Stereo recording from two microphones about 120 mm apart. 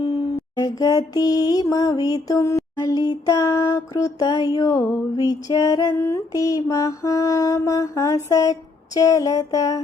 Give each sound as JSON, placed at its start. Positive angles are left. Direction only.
{"t": 0.6, "sound": "mantra", "side_deg": 30}